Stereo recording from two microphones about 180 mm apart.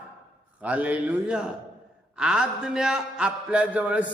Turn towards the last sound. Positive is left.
turn(degrees=-5)  # may be behind; listen again after turning